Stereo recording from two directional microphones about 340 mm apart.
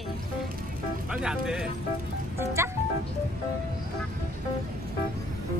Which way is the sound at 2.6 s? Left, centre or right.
Centre.